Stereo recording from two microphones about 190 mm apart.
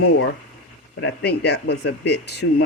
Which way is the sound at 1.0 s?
60° left (ahead or behind).